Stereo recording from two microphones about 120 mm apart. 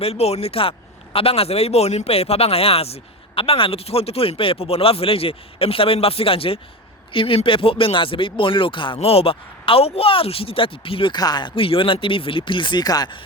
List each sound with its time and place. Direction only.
0.0 s speech: 60° left (ahead or behind)
9.0 s speech: 55° left (ahead or behind); by 13.1 s 35° left (ahead or behind)